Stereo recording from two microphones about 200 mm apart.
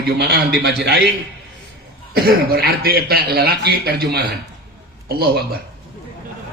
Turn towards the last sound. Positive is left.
turn(degrees=-50)  # may be behind; listen again after turning